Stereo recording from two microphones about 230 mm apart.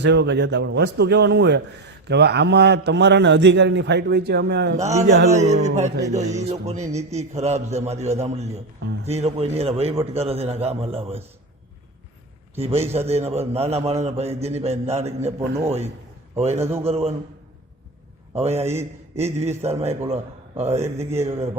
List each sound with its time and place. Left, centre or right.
0.0 s a man's voice: right
5.3 s a man's voice: right
12.5 s a man's voice: right
16.4 s a man's voice: right
18.3 s a man's voice: right